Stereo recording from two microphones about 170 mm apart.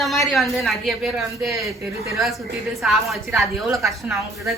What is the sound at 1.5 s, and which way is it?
Speech, 20° right (ahead or behind).